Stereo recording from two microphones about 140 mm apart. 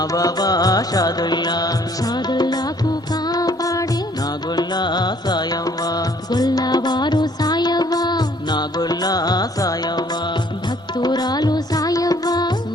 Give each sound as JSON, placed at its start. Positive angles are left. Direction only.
{"t": 0.0, "sound": "music", "side_deg": 25}